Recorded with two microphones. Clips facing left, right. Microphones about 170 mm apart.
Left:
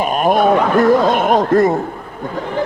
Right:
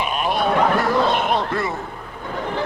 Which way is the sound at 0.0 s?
45° left (ahead or behind).